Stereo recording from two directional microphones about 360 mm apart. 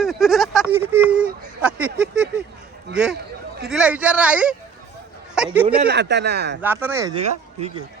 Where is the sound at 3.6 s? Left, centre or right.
Centre.